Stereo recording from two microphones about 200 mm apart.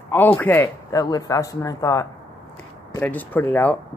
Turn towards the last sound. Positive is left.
turn(degrees=10)  # may be behind; listen again after turning